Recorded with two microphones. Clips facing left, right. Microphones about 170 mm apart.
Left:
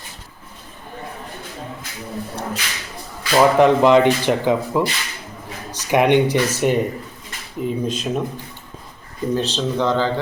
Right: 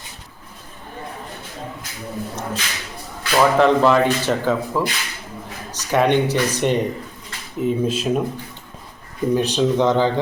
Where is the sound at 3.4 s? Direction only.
15° left (ahead or behind).